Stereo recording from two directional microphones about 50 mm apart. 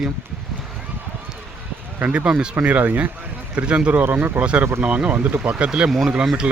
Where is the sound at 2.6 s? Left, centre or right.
Right.